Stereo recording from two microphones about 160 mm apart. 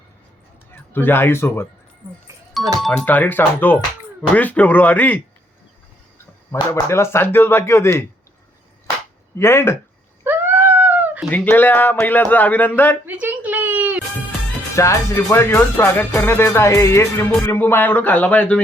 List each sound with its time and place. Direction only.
0.7 s speech: 15° left (ahead or behind)
2.8 s speech: 10° left (ahead or behind)
9.4 s speech: 15° left (ahead or behind)
10.2 s a sound: 10° right (ahead or behind)
11.3 s speech: 10° left (ahead or behind)
13.1 s a sound: 10° right (ahead or behind)
14.8 s speech: 20° left (ahead or behind)